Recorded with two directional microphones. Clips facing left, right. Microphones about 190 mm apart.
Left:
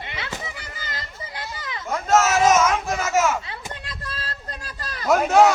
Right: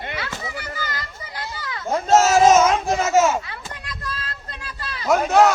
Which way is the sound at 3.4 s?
25° left (ahead or behind).